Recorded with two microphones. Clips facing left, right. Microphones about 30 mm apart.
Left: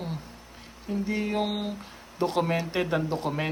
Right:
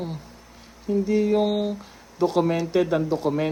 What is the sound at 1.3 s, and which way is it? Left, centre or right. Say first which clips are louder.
Speech: right 7 dB; centre.